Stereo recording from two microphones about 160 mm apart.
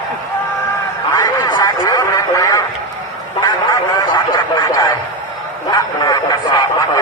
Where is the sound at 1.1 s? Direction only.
25° left (ahead or behind).